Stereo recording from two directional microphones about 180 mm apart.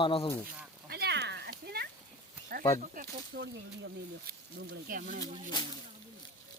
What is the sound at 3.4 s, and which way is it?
Speech, 80° right.